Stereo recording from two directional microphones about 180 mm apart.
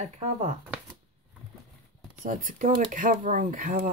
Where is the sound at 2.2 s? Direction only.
45° right (ahead or behind).